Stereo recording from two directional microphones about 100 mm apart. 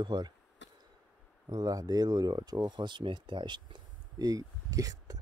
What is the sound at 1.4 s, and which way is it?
Speech, 40° right (ahead or behind).